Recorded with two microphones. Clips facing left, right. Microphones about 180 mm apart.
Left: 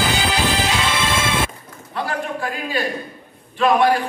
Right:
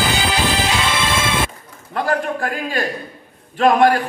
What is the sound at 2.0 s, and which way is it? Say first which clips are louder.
A man's voice: right 4 dB; 50° right (ahead or behind).